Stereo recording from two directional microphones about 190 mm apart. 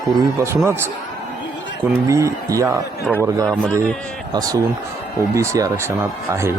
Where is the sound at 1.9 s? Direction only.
15° right (ahead or behind).